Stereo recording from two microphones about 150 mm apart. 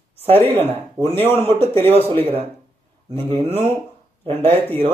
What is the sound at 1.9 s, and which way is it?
Speech, 40° right (ahead or behind).